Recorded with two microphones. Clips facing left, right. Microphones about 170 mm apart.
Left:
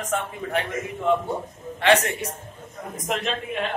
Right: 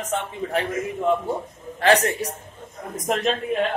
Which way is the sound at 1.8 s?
35° right (ahead or behind).